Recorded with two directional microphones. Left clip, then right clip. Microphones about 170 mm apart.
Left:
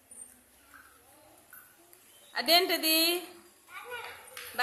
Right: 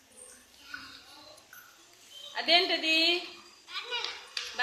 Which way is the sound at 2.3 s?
25° left (ahead or behind).